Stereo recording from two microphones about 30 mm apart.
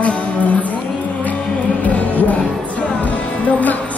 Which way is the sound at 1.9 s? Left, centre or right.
Left.